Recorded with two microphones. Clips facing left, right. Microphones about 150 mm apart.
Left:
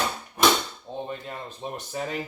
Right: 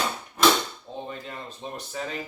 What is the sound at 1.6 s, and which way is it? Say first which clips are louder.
Speech: left 3 dB; 25° left (ahead or behind).